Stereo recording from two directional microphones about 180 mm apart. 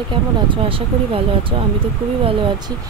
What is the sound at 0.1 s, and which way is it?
Speech, 30° right (ahead or behind).